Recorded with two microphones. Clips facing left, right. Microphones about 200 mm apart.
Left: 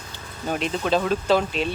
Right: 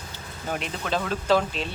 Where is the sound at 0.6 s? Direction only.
20° left (ahead or behind).